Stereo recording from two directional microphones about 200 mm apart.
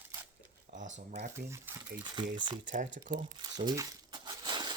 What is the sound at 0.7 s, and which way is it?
Speech, 35° right (ahead or behind).